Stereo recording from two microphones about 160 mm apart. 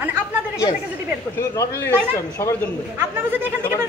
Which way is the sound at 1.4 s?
15° left (ahead or behind).